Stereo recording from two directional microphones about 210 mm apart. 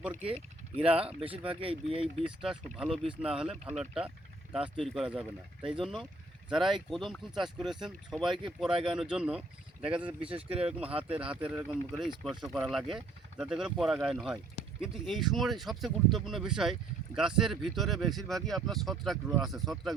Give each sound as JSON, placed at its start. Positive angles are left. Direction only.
{"t": 0.0, "sound": "speech", "side_deg": -10}
{"t": 1.2, "sound": "speech", "side_deg": -25}
{"t": 2.2, "sound": "speech", "side_deg": -5}
{"t": 10.2, "sound": "speech", "side_deg": -25}
{"t": 11.2, "sound": "speech", "side_deg": -5}